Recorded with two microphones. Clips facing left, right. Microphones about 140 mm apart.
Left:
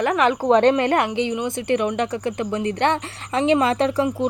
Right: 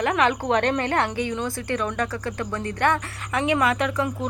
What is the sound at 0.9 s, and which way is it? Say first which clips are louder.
A woman's voice: left 3 dB; 20° left (ahead or behind).